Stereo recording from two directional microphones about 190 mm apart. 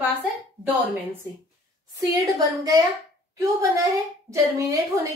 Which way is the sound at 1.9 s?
20° right (ahead or behind).